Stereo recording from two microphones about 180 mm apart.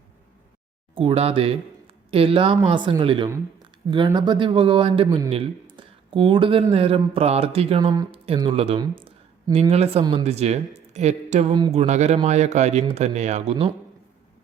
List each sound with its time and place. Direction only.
0.9 s speech: 30° right (ahead or behind)
10.0 s speech: 25° right (ahead or behind)
10.2 s speech: 35° right (ahead or behind)
11.5 s speech: 25° right (ahead or behind)